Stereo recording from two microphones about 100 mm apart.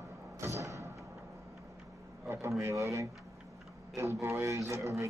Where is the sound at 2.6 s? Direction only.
30° right (ahead or behind).